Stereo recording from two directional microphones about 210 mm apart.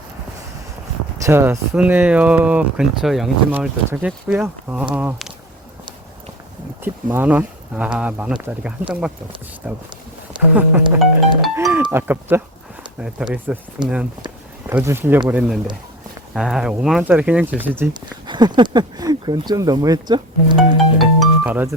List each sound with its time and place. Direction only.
1.2 s speech: 10° right (ahead or behind)
6.8 s speech: 10° right (ahead or behind)
11.5 s music: 10° right (ahead or behind)
13.0 s speech: 5° right (ahead or behind)
18.3 s speech: 20° right (ahead or behind)
21.0 s speech: 5° right (ahead or behind)